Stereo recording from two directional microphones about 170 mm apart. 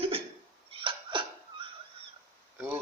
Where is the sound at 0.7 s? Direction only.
30° right (ahead or behind).